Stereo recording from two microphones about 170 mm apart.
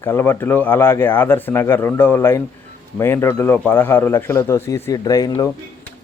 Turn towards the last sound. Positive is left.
turn(degrees=20)  # may be behind; listen again after turning